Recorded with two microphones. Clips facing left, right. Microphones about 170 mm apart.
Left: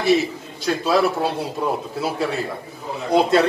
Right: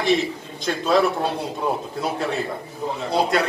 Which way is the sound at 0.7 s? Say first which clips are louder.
Left 1 dB; 5° left (ahead or behind).